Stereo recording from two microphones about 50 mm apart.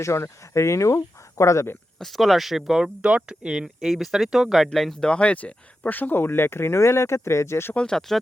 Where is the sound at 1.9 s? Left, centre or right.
Centre.